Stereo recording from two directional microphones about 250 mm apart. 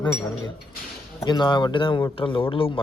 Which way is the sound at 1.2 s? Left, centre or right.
Centre.